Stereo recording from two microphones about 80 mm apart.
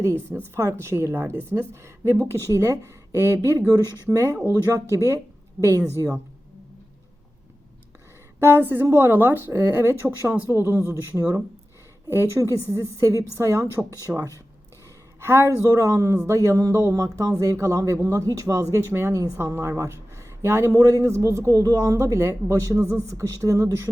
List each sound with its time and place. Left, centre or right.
0.0 s a man's voice: right
3.7 s a man's voice: right
8.4 s a man's voice: right
15.2 s a man's voice: right
22.8 s a man's voice: left
23.1 s a man's voice: right